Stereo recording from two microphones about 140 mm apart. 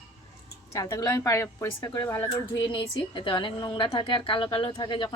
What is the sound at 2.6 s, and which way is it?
A woman's voice, 35° left (ahead or behind).